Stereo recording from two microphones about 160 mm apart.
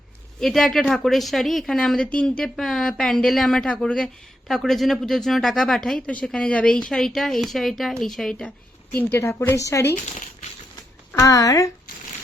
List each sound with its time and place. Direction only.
0.3 s a woman's voice: centre (ahead or behind); by 9.9 s 20° left (ahead or behind)
9.9 s speech: 50° left (ahead or behind)
11.1 s speech: 20° left (ahead or behind)